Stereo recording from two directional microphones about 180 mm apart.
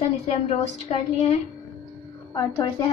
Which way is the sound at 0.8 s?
35° left (ahead or behind).